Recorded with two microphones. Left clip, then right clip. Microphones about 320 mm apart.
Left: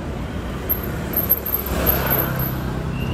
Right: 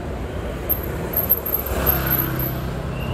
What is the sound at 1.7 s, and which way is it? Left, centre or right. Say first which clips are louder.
Vehicle: left 2 dB; left.